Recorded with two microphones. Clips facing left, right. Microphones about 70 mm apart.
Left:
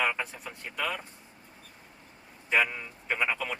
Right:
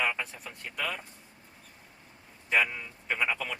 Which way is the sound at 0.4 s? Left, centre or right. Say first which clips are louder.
Left 2 dB; centre.